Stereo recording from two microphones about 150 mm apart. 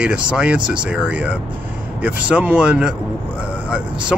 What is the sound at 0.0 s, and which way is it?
Speech, 5° right (ahead or behind).